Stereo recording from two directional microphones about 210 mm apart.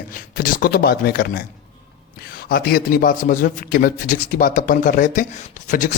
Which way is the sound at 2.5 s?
45° left (ahead or behind).